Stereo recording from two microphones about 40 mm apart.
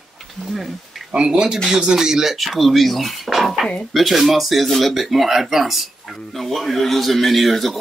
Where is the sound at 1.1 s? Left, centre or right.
Right.